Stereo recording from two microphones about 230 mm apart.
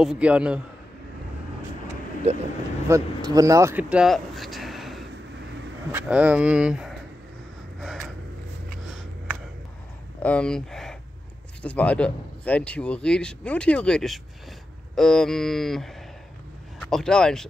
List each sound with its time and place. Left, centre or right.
0.0 s speech: centre
2.3 s speech: right
2.9 s speech: centre
7.8 s a sound: centre
10.2 s speech: centre